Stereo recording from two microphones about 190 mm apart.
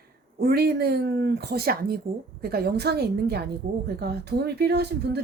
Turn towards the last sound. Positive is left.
turn(degrees=-60)  # may be behind; listen again after turning